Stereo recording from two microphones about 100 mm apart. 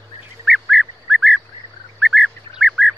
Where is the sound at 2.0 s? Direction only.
5° right (ahead or behind).